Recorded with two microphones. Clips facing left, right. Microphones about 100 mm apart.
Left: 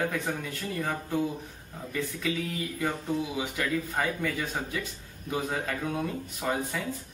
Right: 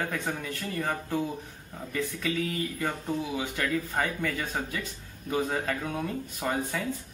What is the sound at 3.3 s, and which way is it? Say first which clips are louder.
Speech: even; 10° left (ahead or behind).